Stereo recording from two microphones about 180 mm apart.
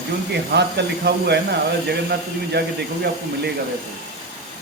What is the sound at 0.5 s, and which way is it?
A man's voice, 70° right (ahead or behind).